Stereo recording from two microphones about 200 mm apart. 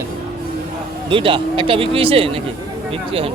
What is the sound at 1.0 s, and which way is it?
Speech, 25° right (ahead or behind).